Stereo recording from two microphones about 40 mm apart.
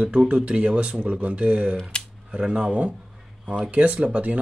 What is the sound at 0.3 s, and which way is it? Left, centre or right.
Speech, right.